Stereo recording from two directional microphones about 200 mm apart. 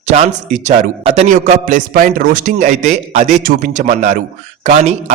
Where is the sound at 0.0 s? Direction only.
35° right (ahead or behind).